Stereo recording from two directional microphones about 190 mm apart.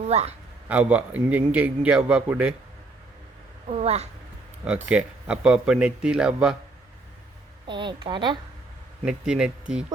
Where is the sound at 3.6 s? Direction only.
35° right (ahead or behind).